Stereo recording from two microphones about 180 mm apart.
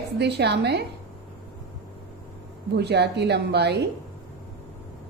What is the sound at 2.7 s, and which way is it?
A woman's voice, 70° right (ahead or behind).